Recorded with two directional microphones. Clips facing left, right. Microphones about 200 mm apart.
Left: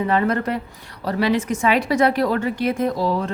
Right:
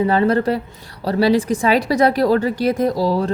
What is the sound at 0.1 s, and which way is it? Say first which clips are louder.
A woman's voice: right 4 dB; 30° right (ahead or behind).